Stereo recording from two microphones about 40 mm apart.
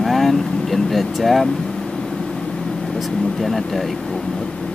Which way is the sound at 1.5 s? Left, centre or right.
Centre.